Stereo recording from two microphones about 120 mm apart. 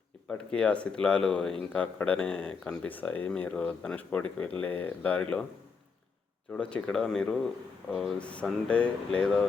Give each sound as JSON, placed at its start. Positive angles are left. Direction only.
{"t": 0.3, "sound": "speech", "side_deg": 10}
{"t": 6.5, "sound": "speech", "side_deg": 10}